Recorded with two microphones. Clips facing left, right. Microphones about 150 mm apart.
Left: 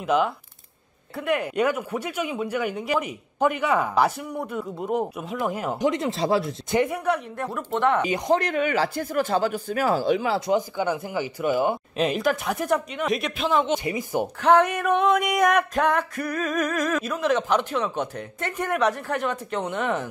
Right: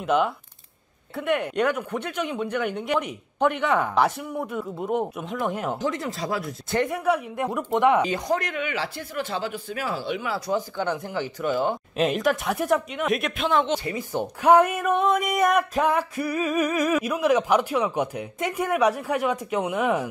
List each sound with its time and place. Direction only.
0.0 s speech: centre (ahead or behind)
5.8 s speech: 20° left (ahead or behind)
7.3 s a sound: 15° right (ahead or behind)
8.3 s speech: 35° left (ahead or behind)
10.8 s speech: 10° left (ahead or behind)
12.0 s speech: centre (ahead or behind)
14.4 s a sound: 10° right (ahead or behind)